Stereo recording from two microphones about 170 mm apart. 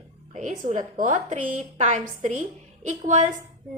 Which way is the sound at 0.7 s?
50° right (ahead or behind).